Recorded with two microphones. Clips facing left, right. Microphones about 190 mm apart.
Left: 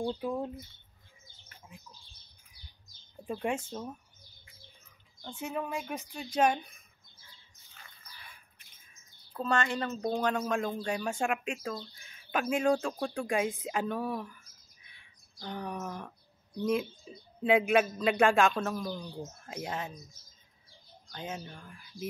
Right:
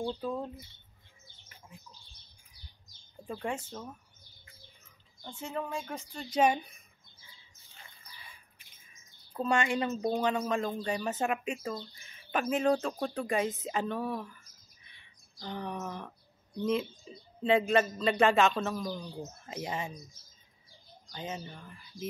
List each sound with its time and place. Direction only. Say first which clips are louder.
0.0 s speech: left 1 dB; 10° left (ahead or behind)
3.3 s speech: left 3 dB; 20° left (ahead or behind)
5.3 s speech: left 1 dB; 15° left (ahead or behind)
6.3 s a woman's voice: right 1 dB; 5° right (ahead or behind)
9.3 s speech: right 1 dB; 15° right (ahead or behind)
13.6 s a sound: even; centre (ahead or behind)
15.3 s speech: even; centre (ahead or behind)
21.1 s speech: even; 5° right (ahead or behind)